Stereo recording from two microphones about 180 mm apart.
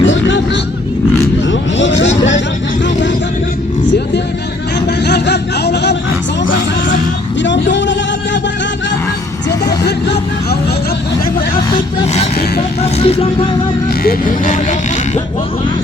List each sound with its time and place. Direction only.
0.0 s vehicle: 90° left
4.9 s a sound: 65° left (ahead or behind)
7.4 s vehicle: 85° left
12.8 s vehicle: 35° left (ahead or behind)
14.0 s speech: 50° left (ahead or behind)